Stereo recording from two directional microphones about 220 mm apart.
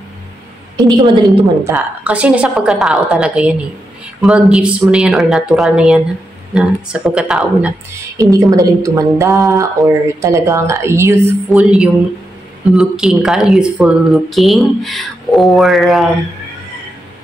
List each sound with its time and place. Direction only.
0.7 s a woman's voice: 20° right (ahead or behind)
1.6 s speech: 10° right (ahead or behind)
8.2 s a woman's voice: 15° right (ahead or behind)